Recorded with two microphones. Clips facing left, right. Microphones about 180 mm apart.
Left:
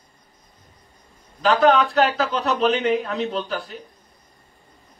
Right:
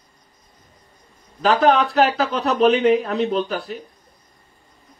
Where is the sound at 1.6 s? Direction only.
35° right (ahead or behind).